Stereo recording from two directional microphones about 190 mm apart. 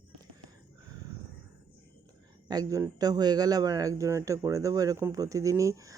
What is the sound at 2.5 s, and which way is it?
A man's voice, 20° right (ahead or behind).